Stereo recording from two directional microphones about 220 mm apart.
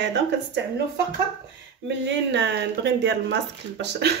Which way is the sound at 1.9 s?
50° right (ahead or behind).